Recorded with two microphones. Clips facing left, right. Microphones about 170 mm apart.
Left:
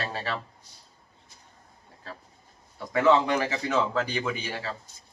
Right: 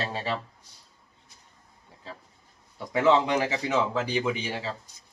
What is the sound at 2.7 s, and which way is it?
Speech, 15° right (ahead or behind).